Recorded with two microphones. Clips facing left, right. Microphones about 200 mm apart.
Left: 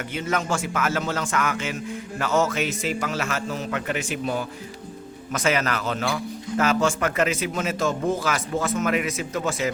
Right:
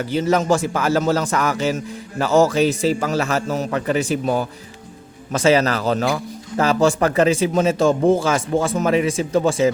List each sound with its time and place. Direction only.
0.0 s a man's voice: 35° right (ahead or behind)